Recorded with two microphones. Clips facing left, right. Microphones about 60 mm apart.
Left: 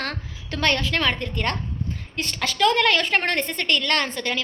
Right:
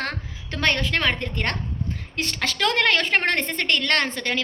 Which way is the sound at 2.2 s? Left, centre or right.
Right.